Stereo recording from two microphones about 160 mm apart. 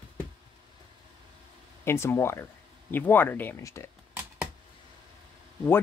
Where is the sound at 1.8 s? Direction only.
15° left (ahead or behind).